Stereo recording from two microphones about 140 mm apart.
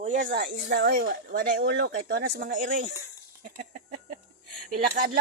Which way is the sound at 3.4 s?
80° right.